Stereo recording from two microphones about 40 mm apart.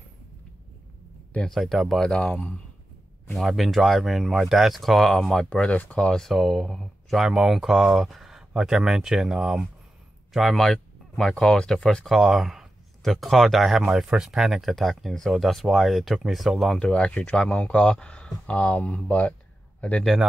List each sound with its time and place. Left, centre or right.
1.5 s speech: centre
2.0 s speech: left
3.3 s speech: centre
5.5 s speech: left
6.1 s speech: centre
7.2 s speech: centre
10.3 s speech: centre
11.3 s speech: left
12.2 s speech: centre
16.8 s speech: left